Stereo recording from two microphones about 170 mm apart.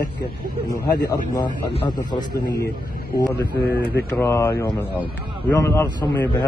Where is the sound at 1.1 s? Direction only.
25° left (ahead or behind).